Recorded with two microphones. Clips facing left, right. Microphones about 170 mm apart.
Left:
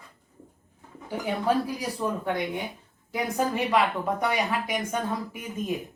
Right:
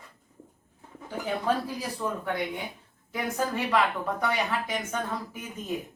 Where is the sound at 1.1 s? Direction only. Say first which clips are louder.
Left 2 dB; 15° left (ahead or behind).